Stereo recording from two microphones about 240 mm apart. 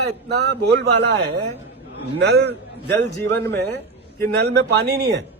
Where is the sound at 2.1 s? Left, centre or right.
Right.